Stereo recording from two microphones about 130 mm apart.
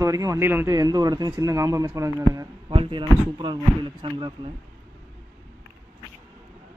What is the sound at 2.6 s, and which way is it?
Speech, 40° right (ahead or behind).